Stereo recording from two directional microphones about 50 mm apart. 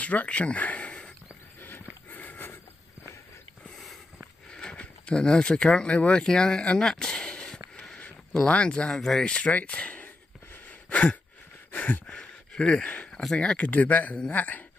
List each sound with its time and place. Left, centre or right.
0.0 s a sound: left
2.0 s sniff: left
3.7 s sniff: centre
4.5 s speech: centre
6.8 s a sound: centre
8.5 s speech: left
8.9 s speech: centre
9.2 s speech: left
10.9 s a sound: centre
12.2 s a sound: centre
13.3 s speech: centre
13.7 s speech: left